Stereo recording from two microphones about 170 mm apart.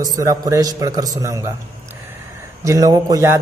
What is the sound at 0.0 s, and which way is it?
A man's voice, 20° right (ahead or behind).